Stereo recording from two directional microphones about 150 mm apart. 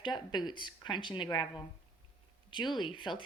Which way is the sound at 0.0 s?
30° left (ahead or behind).